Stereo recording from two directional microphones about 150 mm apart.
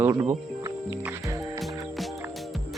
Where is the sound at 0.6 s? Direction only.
15° right (ahead or behind).